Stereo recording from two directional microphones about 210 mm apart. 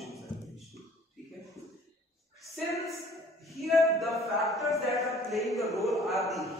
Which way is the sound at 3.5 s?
Centre (ahead or behind).